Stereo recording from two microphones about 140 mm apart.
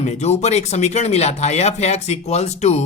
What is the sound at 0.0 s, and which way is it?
Speech, 50° left (ahead or behind).